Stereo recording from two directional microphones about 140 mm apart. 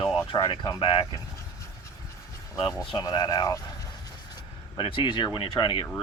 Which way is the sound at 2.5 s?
25° left (ahead or behind).